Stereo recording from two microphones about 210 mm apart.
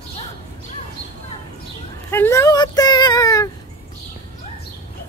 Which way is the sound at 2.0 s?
10° left (ahead or behind).